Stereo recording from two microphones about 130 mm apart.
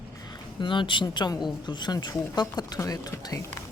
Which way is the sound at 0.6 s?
40° left (ahead or behind).